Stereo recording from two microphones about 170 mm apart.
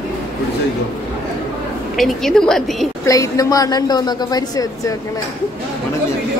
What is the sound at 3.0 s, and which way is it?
A woman's voice, 20° left (ahead or behind).